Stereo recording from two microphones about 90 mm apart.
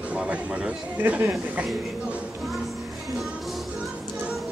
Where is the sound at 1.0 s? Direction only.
20° right (ahead or behind).